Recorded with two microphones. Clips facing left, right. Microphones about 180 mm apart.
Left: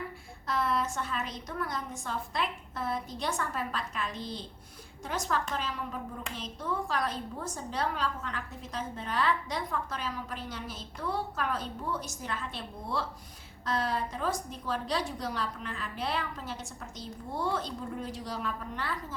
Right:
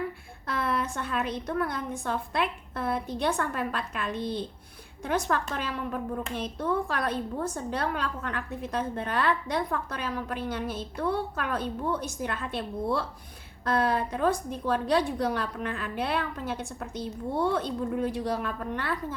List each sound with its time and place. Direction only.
0.4 s a woman's voice: 60° right (ahead or behind)